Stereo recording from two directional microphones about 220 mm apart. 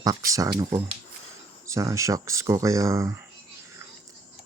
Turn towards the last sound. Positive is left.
turn(degrees=-15)  # may be behind; listen again after turning